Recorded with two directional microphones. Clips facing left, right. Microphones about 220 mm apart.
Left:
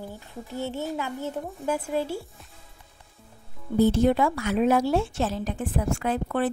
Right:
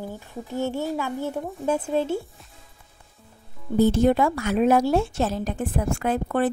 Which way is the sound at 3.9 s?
45° right (ahead or behind).